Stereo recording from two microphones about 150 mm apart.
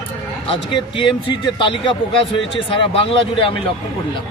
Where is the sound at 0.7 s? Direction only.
30° left (ahead or behind).